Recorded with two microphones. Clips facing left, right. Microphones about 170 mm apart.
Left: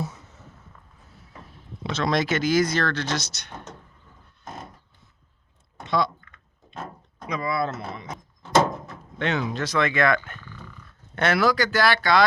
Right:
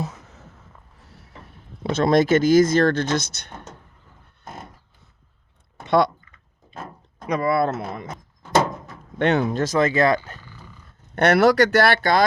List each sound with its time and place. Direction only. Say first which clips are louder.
1.9 s speech: right 7 dB; 50° right (ahead or behind)
7.3 s speech: right 6 dB; 55° right (ahead or behind)
9.1 s speech: right 6 dB; 55° right (ahead or behind); by 10.2 s 35° right (ahead or behind)
11.1 s speech: right 6 dB; 60° right (ahead or behind)